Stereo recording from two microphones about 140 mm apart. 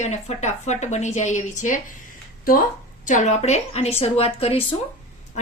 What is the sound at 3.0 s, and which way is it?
A woman's voice, 60° left (ahead or behind).